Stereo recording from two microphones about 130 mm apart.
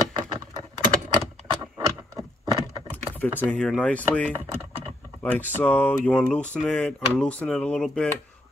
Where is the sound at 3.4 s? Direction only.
10° left (ahead or behind).